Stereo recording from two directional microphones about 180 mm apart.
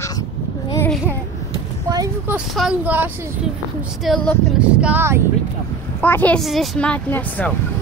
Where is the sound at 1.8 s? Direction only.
20° right (ahead or behind).